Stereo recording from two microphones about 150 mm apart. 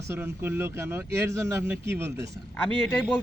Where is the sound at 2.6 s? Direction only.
10° left (ahead or behind).